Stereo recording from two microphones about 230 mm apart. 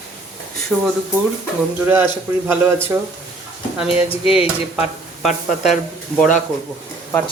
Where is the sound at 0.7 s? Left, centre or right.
Centre.